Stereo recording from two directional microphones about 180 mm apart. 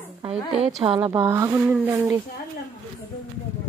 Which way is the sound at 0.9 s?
15° right (ahead or behind).